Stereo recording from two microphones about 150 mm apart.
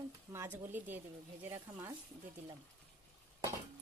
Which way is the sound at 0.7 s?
10° right (ahead or behind).